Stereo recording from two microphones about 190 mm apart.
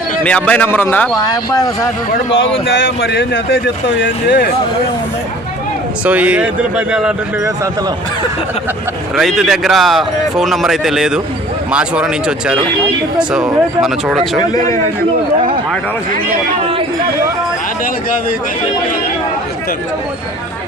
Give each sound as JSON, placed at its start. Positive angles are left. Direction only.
{"t": 0.3, "sound": "a man's voice", "side_deg": 5}
{"t": 1.1, "sound": "speech", "side_deg": 20}
{"t": 2.3, "sound": "speech", "side_deg": 80}
{"t": 6.1, "sound": "speech", "side_deg": -5}
{"t": 9.1, "sound": "speech", "side_deg": 0}